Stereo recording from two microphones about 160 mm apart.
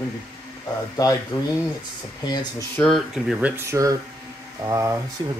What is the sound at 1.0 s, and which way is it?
Speech, 25° left (ahead or behind).